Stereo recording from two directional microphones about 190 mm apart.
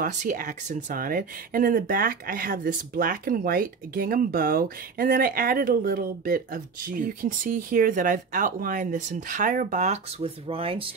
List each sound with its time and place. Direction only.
0.0 s speech: 40° right (ahead or behind)